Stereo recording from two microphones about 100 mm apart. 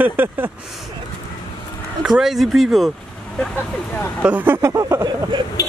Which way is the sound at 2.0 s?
5° right (ahead or behind).